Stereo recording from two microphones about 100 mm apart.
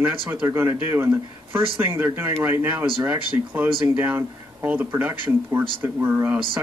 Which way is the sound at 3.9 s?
20° right (ahead or behind).